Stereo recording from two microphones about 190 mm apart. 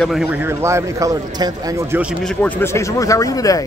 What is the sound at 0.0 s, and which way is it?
A man's voice, centre (ahead or behind).